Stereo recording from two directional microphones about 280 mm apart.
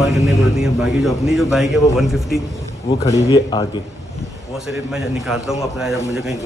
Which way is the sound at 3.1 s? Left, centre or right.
Centre.